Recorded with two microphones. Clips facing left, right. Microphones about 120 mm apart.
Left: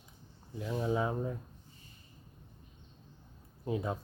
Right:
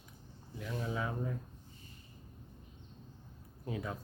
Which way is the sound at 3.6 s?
25° left (ahead or behind).